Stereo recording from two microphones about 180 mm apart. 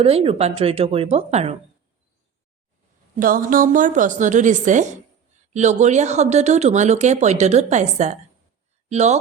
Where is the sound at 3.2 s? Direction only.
50° right (ahead or behind).